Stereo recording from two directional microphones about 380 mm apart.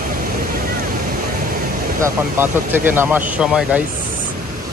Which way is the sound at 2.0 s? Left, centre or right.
Centre.